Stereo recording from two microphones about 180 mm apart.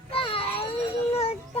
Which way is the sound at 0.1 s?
30° left (ahead or behind).